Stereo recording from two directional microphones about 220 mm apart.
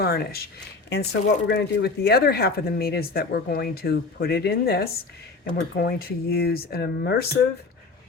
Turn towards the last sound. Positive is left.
turn(degrees=45)  # may be behind; listen again after turning